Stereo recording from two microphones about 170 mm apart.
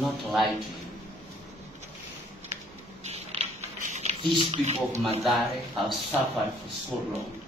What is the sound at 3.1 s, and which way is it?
Creak, 40° right (ahead or behind).